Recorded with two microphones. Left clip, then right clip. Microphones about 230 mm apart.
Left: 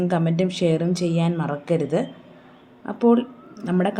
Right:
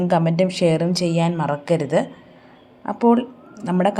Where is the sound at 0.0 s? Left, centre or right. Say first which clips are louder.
Right 4 dB; right.